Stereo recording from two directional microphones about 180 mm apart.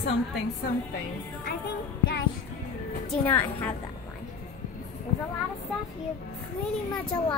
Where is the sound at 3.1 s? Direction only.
10° left (ahead or behind).